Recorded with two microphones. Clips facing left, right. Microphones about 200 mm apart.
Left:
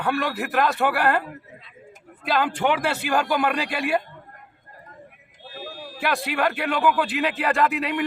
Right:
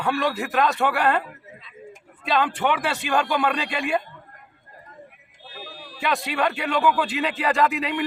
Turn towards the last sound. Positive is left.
turn(degrees=0)  # may be behind; listen again after turning